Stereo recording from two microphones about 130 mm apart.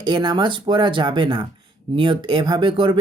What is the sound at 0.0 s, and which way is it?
Speech, 35° right (ahead or behind).